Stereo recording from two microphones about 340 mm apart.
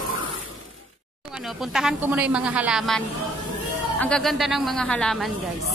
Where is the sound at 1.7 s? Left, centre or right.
Centre.